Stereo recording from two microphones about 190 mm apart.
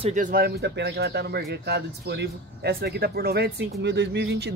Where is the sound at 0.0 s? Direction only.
40° right (ahead or behind).